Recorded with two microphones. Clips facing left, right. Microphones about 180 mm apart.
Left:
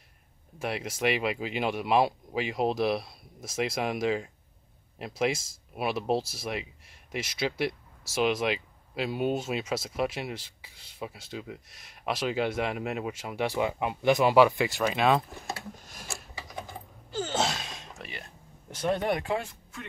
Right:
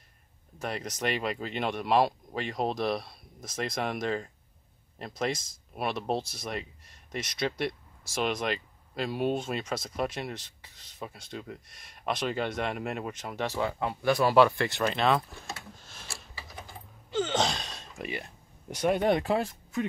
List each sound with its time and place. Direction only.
0.6 s speech: 5° left (ahead or behind)
14.7 s speech: centre (ahead or behind)
15.9 s a sound: 15° left (ahead or behind)
17.1 s gasp: 10° left (ahead or behind)
17.9 s speech: 20° right (ahead or behind)
19.1 s speech: 35° right (ahead or behind)